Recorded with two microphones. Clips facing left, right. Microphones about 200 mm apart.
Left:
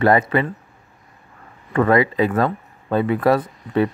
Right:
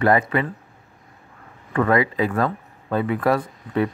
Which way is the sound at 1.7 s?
30° left (ahead or behind).